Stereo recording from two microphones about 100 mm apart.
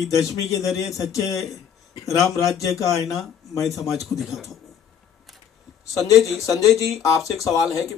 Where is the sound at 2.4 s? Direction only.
35° left (ahead or behind).